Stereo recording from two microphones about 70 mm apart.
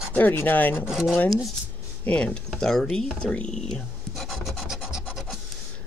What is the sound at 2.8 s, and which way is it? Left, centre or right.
Speech, centre.